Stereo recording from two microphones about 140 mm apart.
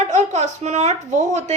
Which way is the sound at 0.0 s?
55° right (ahead or behind).